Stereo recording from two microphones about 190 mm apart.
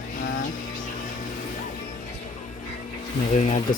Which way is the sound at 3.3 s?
40° left (ahead or behind).